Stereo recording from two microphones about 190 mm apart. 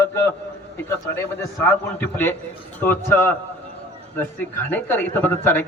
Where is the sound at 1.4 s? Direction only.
15° left (ahead or behind).